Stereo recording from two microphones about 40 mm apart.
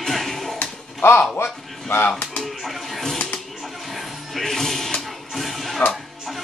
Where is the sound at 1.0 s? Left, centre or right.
Left.